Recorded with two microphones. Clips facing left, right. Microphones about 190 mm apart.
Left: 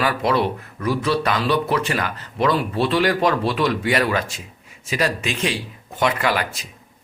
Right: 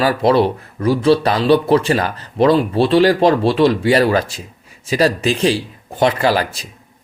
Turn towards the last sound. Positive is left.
turn(degrees=-35)  # may be behind; listen again after turning